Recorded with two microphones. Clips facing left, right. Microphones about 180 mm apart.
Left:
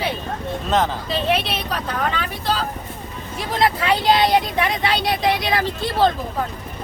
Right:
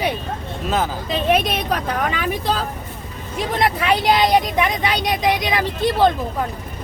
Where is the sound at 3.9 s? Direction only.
15° right (ahead or behind).